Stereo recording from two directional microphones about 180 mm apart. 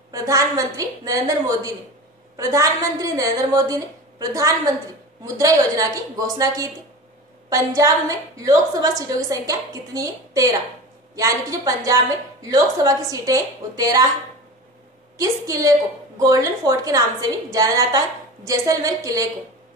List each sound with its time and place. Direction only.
0.1 s a woman's voice: 15° right (ahead or behind)
15.1 s a woman's voice: 20° right (ahead or behind)